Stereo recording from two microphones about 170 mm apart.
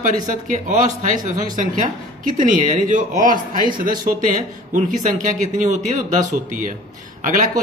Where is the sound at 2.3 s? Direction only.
50° right (ahead or behind).